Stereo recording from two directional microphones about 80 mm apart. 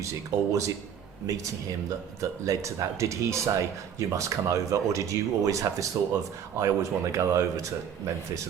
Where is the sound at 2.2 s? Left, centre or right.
Right.